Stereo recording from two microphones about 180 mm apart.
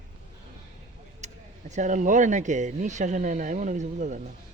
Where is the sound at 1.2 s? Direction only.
40° right (ahead or behind).